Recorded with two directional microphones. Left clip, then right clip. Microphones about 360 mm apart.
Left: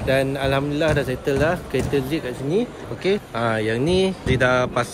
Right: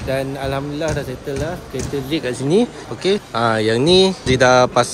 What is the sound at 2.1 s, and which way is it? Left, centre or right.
Speech, right.